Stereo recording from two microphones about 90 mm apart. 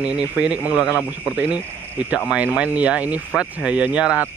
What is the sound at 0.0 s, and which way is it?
Speech, 15° right (ahead or behind).